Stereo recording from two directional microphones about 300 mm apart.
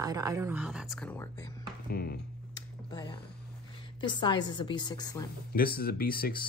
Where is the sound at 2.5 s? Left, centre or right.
Centre.